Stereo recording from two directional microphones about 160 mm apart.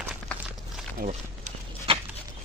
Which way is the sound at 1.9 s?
35° right (ahead or behind).